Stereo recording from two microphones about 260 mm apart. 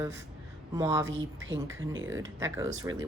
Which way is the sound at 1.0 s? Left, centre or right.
Right.